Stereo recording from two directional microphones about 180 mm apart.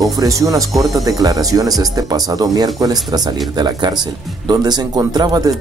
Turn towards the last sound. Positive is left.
turn(degrees=-20)  # may be behind; listen again after turning